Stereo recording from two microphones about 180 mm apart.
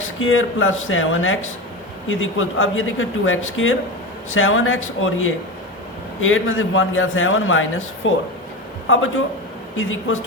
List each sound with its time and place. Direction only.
0.2 s a man's voice: 90° left
9.7 s a man's voice: 90° left